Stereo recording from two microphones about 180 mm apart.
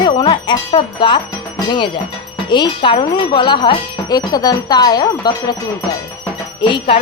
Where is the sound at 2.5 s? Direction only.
25° left (ahead or behind).